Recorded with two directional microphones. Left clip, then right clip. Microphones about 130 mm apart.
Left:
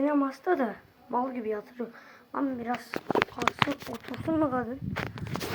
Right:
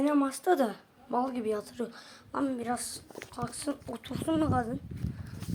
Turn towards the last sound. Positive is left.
turn(degrees=10)  # may be behind; listen again after turning